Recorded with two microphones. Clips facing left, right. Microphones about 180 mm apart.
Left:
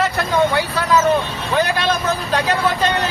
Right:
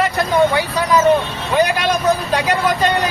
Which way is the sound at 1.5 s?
15° right (ahead or behind).